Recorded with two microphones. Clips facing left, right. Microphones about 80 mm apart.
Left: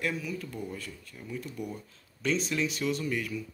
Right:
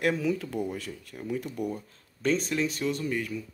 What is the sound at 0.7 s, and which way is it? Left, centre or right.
Speech, right.